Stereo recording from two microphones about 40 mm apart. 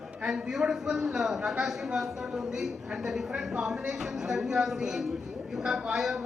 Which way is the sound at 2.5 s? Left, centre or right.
Centre.